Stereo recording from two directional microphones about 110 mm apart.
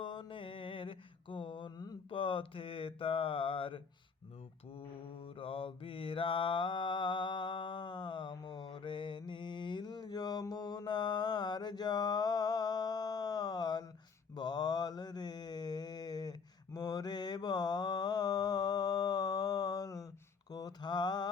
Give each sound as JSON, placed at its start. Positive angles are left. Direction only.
{"t": 0.0, "sound": "mantra", "side_deg": 45}
{"t": 5.2, "sound": "mantra", "side_deg": 55}